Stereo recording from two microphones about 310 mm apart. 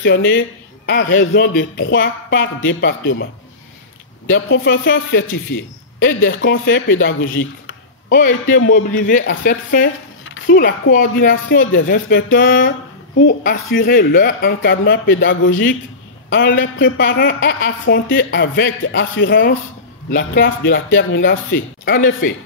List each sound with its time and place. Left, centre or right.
0.0 s a woman's voice: left
4.3 s a woman's voice: left
8.1 s a man's voice: left
10.9 s a man's voice: left
13.7 s a woman's voice: left